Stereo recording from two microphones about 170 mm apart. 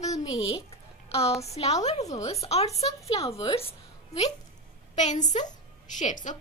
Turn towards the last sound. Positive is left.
turn(degrees=45)  # may be behind; listen again after turning